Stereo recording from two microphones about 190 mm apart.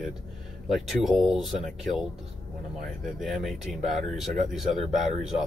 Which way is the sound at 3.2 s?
Centre (ahead or behind).